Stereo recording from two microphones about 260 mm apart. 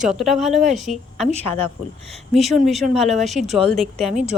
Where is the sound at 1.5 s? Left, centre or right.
Left.